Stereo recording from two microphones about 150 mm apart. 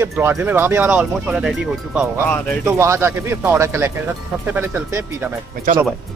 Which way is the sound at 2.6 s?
20° right (ahead or behind).